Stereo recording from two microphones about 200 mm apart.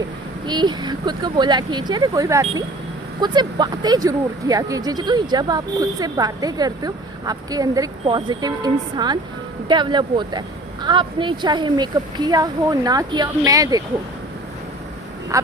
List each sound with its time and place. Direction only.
0.4 s speech: 20° right (ahead or behind)